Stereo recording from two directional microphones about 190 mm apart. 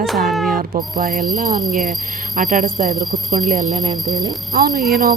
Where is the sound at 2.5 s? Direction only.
45° right (ahead or behind).